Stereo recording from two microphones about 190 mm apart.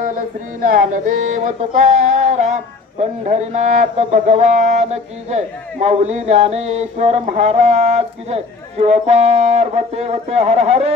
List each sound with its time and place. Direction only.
0.0 s speech: 45° right (ahead or behind)